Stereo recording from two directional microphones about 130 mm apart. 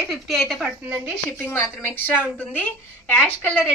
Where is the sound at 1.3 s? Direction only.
15° left (ahead or behind).